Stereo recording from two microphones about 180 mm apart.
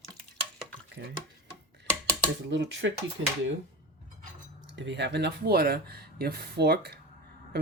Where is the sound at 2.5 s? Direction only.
85° right.